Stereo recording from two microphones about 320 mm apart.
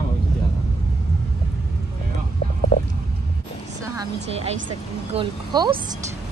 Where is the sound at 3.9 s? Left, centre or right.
Centre.